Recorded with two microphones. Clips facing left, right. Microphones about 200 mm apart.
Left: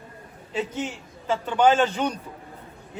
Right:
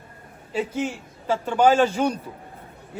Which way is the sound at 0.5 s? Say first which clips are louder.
Right 3 dB; 10° right (ahead or behind).